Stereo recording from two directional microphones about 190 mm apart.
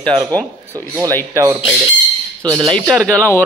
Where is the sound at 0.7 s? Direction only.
15° right (ahead or behind).